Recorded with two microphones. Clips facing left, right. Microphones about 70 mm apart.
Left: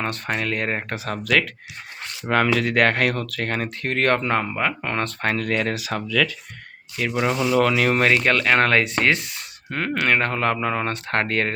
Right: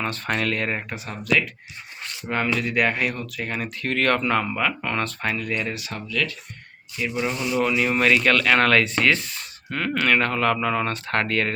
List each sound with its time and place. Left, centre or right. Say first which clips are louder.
0.3 s speech: right 1 dB; centre
1.0 s speech: left 1 dB; left
3.6 s speech: even; left
5.2 s speech: left 4 dB; left
6.9 s speech: left 4 dB; left
7.9 s speech: even; left